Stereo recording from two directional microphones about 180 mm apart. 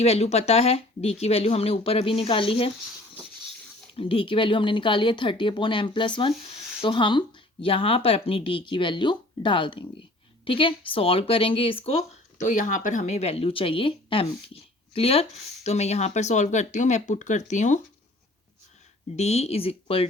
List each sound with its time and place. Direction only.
0.0 s speech: 35° left (ahead or behind)
3.9 s speech: 30° left (ahead or behind)
12.4 s speech: 45° left (ahead or behind)
19.1 s speech: 35° left (ahead or behind)